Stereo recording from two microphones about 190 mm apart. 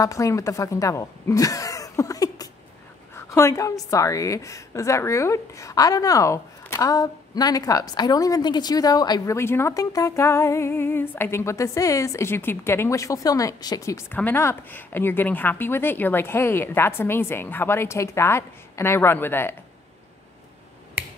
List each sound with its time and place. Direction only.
0.0 s a woman's voice: 15° left (ahead or behind)